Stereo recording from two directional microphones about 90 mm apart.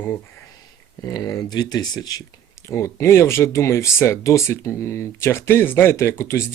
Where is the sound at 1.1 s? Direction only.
50° left (ahead or behind).